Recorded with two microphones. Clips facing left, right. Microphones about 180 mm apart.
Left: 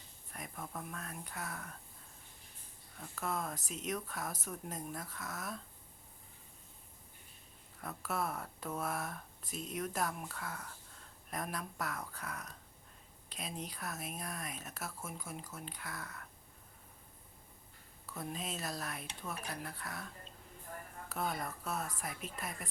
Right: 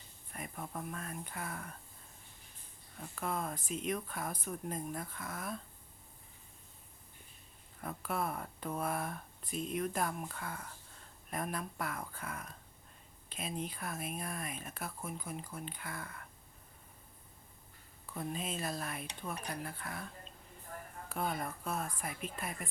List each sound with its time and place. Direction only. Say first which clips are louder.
0.3 s a sound: right 2 dB; 5° right (ahead or behind)
0.7 s speech: right 3 dB; 5° right (ahead or behind)
3.2 s speech: right 1 dB; centre (ahead or behind)
7.8 s speech: right 1 dB; centre (ahead or behind)
18.2 s speech: right 3 dB; centre (ahead or behind)
21.1 s speech: right 1 dB; centre (ahead or behind)